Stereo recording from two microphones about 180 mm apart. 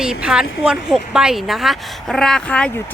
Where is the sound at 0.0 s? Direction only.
5° right (ahead or behind).